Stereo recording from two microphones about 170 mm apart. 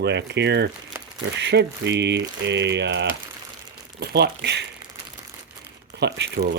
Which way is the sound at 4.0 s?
75° right (ahead or behind).